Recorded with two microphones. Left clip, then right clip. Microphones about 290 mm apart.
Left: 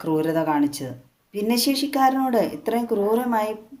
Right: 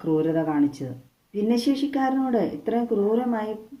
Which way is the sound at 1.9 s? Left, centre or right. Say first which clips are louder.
Left 5 dB; left.